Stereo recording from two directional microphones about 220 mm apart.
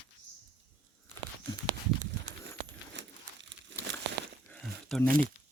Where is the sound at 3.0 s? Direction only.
55° right (ahead or behind).